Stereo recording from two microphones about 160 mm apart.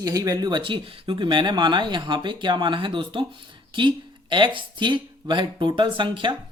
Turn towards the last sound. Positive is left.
turn(degrees=-30)  # may be behind; listen again after turning